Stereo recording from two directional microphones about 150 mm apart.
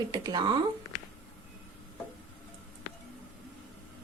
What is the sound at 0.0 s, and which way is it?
Speech, 25° right (ahead or behind).